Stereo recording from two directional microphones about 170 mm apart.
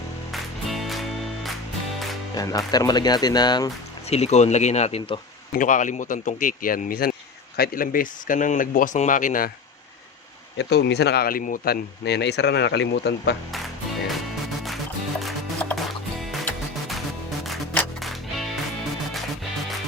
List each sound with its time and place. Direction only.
0.3 s music: centre (ahead or behind)
2.3 s speech: 20° left (ahead or behind)
4.1 s speech: 40° left (ahead or behind)
5.5 s speech: 50° left (ahead or behind)
10.6 s speech: 80° left
15.2 s music: centre (ahead or behind)
17.5 s music: centre (ahead or behind)